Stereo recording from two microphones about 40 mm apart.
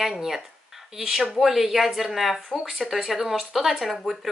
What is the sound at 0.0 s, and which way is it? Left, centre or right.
Speech, centre.